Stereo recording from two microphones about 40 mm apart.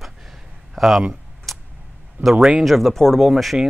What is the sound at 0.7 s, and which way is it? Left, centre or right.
Speech, centre.